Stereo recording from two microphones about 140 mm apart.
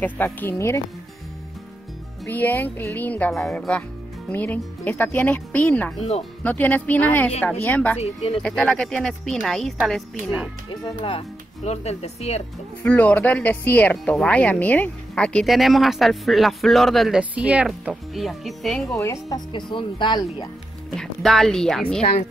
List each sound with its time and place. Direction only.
0.0 s speech: 10° left (ahead or behind)
2.3 s speech: 10° left (ahead or behind)
8.0 s speech: 45° left (ahead or behind)
8.4 s speech: 5° left (ahead or behind)
11.0 s speech: 45° left (ahead or behind)
12.8 s speech: 10° left (ahead or behind)
17.2 s speech: 10° right (ahead or behind)
18.9 s speech: 25° left (ahead or behind)
20.9 s speech: 5° left (ahead or behind)